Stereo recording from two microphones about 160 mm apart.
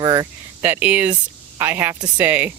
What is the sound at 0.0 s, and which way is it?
Cricket, 25° right (ahead or behind).